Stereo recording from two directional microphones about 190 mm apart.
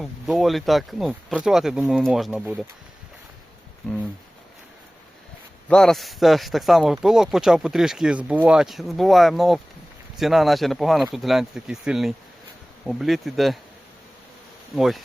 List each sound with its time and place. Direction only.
0.0 s speech: centre (ahead or behind)
5.6 s speech: 5° left (ahead or behind)
14.8 s speech: centre (ahead or behind)